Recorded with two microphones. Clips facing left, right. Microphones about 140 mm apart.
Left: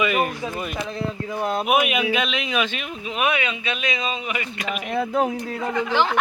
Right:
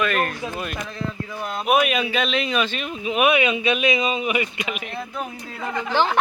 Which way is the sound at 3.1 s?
15° right (ahead or behind).